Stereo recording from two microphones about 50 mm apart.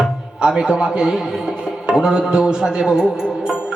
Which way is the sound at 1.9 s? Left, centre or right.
Centre.